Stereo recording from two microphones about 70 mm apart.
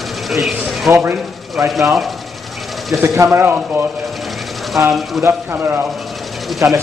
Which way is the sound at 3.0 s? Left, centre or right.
Right.